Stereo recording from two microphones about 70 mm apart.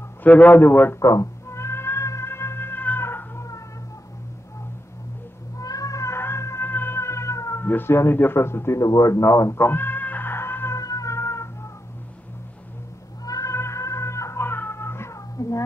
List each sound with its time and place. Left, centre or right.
0.2 s a man's voice: left
0.9 s speech: left
1.5 s cat: left
5.6 s music: left
7.6 s speech: left
8.8 s a man's voice: left
9.6 s cat: left
10.8 s music: left
11.1 s cat: left
13.2 s cat: left
13.6 s music: left
15.4 s a sound: left